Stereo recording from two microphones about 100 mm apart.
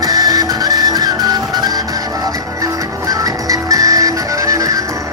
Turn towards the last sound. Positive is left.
turn(degrees=-35)  # may be behind; listen again after turning